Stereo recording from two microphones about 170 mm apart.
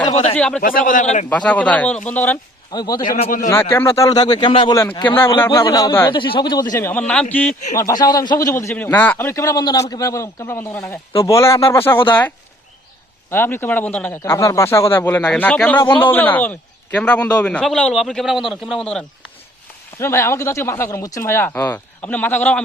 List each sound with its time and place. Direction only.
0.0 s a sound: 35° left (ahead or behind)
0.3 s a man's voice: 5° left (ahead or behind)
0.6 s a man's voice: 55° left (ahead or behind)
1.3 s a man's voice: 10° left (ahead or behind)
2.7 s a man's voice: 25° left (ahead or behind)
3.2 s a man's voice: 50° left (ahead or behind)
3.5 s a man's voice: 15° left (ahead or behind); by 4.8 s 30° left (ahead or behind)
5.0 s a man's voice: 15° left (ahead or behind)
6.1 s a man's voice: 30° left (ahead or behind)
6.7 s a man's voice: 15° left (ahead or behind)
7.8 s a man's voice: 20° left (ahead or behind)
13.3 s a man's voice: 15° left (ahead or behind)
20.0 s a man's voice: 15° left (ahead or behind)